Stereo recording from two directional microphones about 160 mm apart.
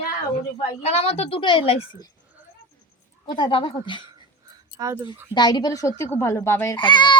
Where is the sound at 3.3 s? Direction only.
30° left (ahead or behind).